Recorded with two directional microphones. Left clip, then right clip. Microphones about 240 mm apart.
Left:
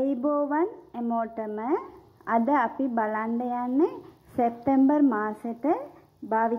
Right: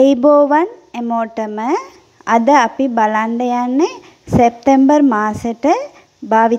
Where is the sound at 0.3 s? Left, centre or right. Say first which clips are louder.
Right 15 dB; right.